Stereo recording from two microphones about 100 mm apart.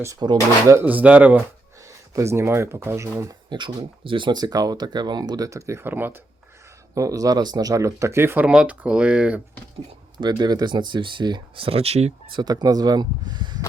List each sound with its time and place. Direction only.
0.2 s speech: 45° right (ahead or behind)
0.9 s speech: 15° right (ahead or behind)
1.8 s speech: 30° right (ahead or behind)
3.5 s speech: 50° right (ahead or behind); by 6.2 s 20° right (ahead or behind)
6.9 s speech: 35° right (ahead or behind)
8.4 s speech: 10° right (ahead or behind)
10.2 s speech: 45° right (ahead or behind); by 12.1 s 90° right
12.3 s speech: 45° right (ahead or behind)